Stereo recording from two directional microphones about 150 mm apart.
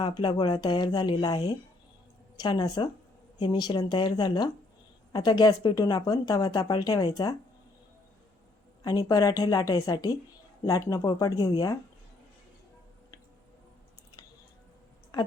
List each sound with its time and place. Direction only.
0.0 s a woman's voice: 30° left (ahead or behind)
8.8 s a woman's voice: 25° left (ahead or behind)